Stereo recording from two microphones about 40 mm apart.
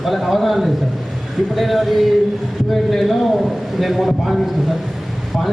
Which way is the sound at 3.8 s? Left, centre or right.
Centre.